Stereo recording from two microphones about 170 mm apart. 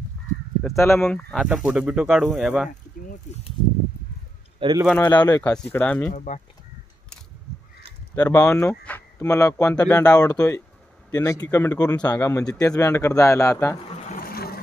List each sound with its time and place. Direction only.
0.7 s speech: 15° left (ahead or behind)
1.3 s speech: centre (ahead or behind)
4.6 s speech: 25° right (ahead or behind)
5.0 s speech: 25° left (ahead or behind)
5.4 s speech: 10° left (ahead or behind)
6.1 s speech: 45° left (ahead or behind)
8.1 s speech: 20° left (ahead or behind)
14.0 s a sound: 55° left (ahead or behind)